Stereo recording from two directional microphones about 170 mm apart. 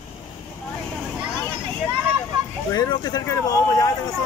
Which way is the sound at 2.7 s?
25° left (ahead or behind).